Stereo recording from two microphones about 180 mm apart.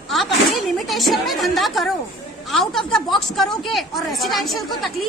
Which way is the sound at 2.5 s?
Centre (ahead or behind).